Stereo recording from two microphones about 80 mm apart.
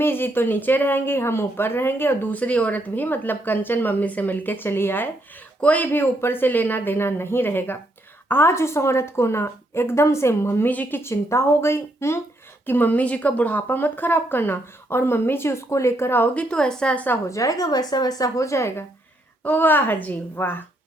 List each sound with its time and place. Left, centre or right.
0.0 s speech: left
5.5 s a woman's voice: centre; by 10.7 s left
10.7 s a woman's voice: left
16.3 s a woman's voice: centre
17.2 s speech: left